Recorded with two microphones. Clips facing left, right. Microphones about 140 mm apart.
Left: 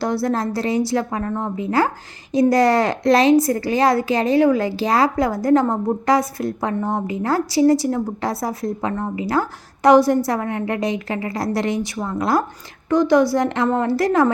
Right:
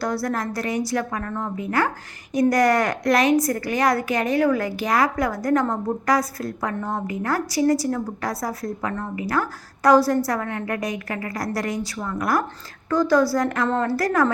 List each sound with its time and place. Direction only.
0.0 s a woman's voice: 25° left (ahead or behind)